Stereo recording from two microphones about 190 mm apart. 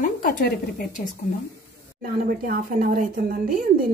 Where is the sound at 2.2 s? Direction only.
50° right (ahead or behind).